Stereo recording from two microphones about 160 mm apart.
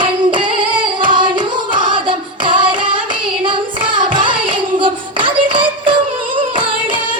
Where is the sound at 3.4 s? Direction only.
30° right (ahead or behind).